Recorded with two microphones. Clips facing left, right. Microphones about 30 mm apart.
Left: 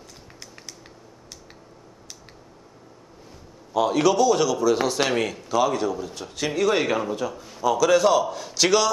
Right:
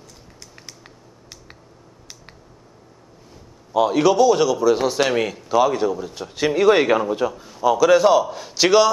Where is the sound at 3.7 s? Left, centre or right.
Centre.